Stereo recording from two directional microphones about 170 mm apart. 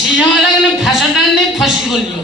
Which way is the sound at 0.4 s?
Centre (ahead or behind).